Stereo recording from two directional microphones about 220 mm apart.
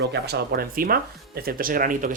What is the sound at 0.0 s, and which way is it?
Speech, 50° right (ahead or behind).